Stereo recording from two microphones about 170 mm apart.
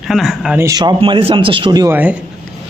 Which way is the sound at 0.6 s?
20° right (ahead or behind).